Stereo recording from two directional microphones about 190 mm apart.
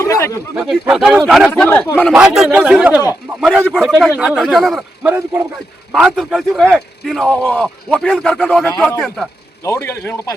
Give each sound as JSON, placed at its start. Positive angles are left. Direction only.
{"t": 0.0, "sound": "a sound", "side_deg": 15}
{"t": 0.5, "sound": "speech", "side_deg": -5}
{"t": 1.5, "sound": "speech", "side_deg": 10}
{"t": 8.6, "sound": "speech", "side_deg": 15}
{"t": 9.6, "sound": "speech", "side_deg": 15}